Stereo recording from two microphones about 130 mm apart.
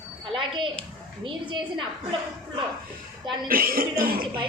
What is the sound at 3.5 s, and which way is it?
Speech, 90° right.